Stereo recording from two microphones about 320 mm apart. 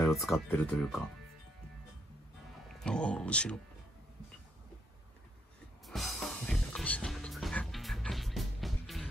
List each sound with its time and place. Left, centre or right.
0.1 s speech: centre
2.8 s speech: centre
5.9 s music: centre